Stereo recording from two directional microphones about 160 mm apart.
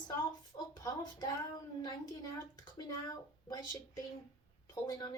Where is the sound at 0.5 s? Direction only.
25° left (ahead or behind).